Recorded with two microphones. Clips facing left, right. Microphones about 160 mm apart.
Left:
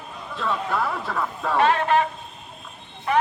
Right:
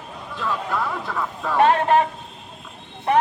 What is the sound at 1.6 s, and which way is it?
Speech, 45° right (ahead or behind).